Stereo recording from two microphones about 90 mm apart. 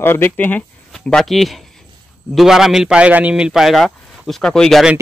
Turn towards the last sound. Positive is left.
turn(degrees=5)  # may be behind; listen again after turning